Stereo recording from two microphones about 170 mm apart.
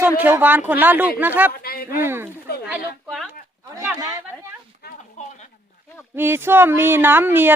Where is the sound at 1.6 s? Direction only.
65° left (ahead or behind).